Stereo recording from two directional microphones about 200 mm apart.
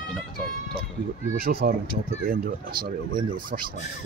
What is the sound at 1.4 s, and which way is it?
Speech, 50° right (ahead or behind).